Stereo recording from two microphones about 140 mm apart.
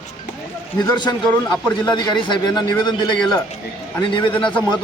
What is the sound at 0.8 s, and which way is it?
A man's voice, 30° left (ahead or behind).